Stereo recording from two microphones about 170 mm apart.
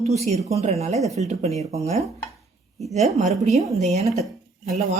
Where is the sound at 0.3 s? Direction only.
40° right (ahead or behind).